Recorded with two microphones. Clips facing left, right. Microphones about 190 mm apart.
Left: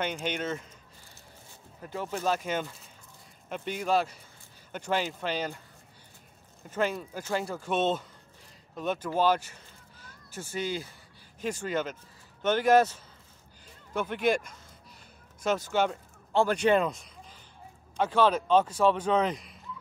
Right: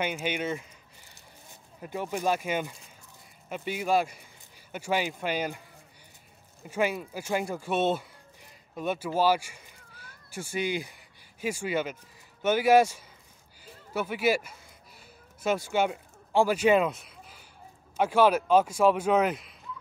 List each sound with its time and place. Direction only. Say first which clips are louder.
0.0 s speech: right 1 dB; 10° right (ahead or behind)
1.8 s speech: right 2 dB; 15° right (ahead or behind)
6.7 s a man's voice: right 1 dB; 10° right (ahead or behind)